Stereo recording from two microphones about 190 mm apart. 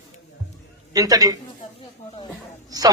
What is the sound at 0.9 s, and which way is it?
Speech, 20° right (ahead or behind).